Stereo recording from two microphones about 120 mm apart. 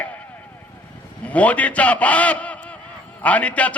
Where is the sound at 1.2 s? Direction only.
10° left (ahead or behind).